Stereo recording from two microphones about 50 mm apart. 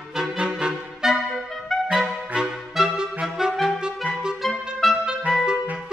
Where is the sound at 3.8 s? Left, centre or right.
Centre.